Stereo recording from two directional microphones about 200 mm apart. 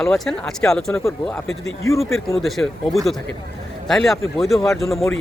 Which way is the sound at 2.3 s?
Centre (ahead or behind).